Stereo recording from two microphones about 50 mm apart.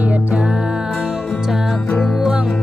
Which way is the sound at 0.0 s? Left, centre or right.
Right.